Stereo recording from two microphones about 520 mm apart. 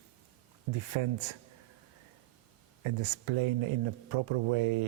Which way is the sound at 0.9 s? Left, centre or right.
Right.